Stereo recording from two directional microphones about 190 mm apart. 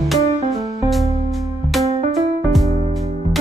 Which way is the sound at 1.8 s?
35° right (ahead or behind).